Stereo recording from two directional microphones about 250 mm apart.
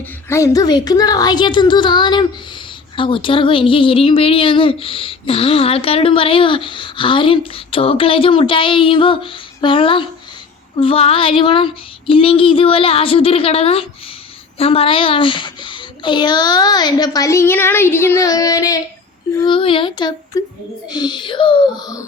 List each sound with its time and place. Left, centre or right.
0.3 s a child's voice: centre